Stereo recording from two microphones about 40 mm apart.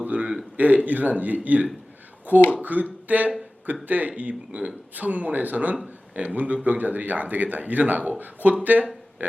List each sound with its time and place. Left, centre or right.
0.0 s a sound: right
0.5 s speech: right
5.7 s speech: right
6.2 s speech: right